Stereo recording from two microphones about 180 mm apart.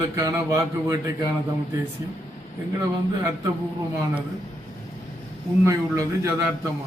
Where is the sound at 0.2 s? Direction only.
20° right (ahead or behind).